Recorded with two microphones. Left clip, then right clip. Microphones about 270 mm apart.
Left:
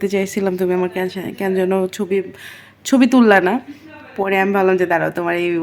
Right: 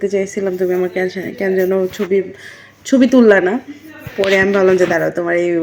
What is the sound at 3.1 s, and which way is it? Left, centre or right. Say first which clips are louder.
Speech: right 3 dB; centre.